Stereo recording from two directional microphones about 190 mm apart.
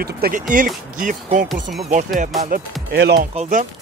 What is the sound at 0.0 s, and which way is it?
Speech, 50° right (ahead or behind).